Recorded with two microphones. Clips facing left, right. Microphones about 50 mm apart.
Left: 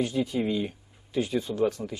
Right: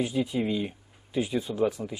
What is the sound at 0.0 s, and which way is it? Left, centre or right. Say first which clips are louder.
Speech: even; centre.